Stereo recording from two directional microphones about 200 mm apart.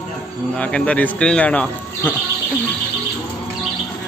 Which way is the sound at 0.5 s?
5° left (ahead or behind).